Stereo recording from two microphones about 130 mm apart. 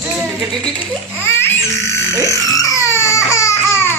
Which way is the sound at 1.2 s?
20° left (ahead or behind).